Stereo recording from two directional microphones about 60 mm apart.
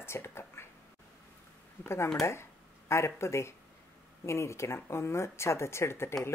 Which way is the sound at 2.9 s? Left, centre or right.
Left.